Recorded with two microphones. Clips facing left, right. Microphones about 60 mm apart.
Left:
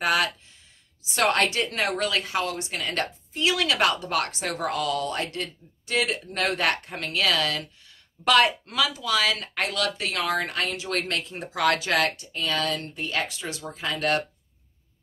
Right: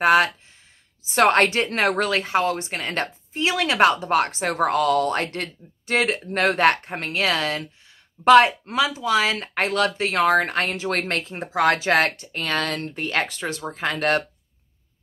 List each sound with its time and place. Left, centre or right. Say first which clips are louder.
0.0 s a woman's voice: right 7 dB; right